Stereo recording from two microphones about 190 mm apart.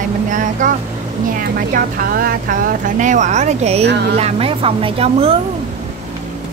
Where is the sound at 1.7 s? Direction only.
50° right (ahead or behind); by 5.3 s 30° right (ahead or behind).